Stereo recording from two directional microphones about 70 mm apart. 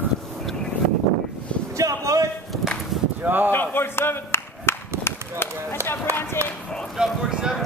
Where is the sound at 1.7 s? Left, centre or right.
Right.